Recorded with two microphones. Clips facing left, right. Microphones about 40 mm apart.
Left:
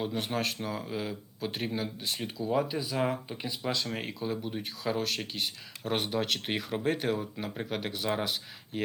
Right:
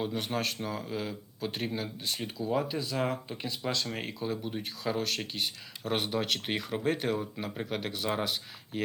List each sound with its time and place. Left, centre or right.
0.0 s speech: centre